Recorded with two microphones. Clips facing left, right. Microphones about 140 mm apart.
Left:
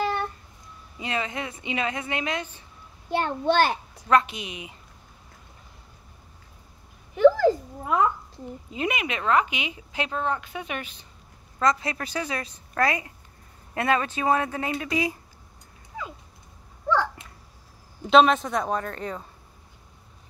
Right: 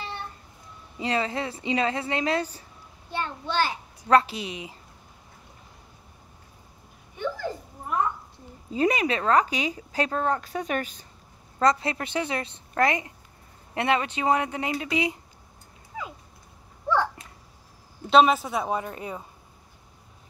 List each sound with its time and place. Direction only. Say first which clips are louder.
0.0 s a sound: left 10 dB; 90° left
0.9 s a woman's voice: right 3 dB; 30° right (ahead or behind)
3.1 s a child's voice: left 7 dB; 60° left (ahead or behind)
4.1 s a woman's voice: right 1 dB; 30° right (ahead or behind)
7.2 s a sound: left 14 dB; 90° left
8.7 s a woman's voice: right 5 dB; 35° right (ahead or behind)
11.6 s a woman's voice: right 2 dB; 30° right (ahead or behind)
18.1 s speech: left 1 dB; 5° right (ahead or behind)